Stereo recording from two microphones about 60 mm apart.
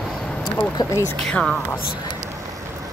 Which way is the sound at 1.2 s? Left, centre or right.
Centre.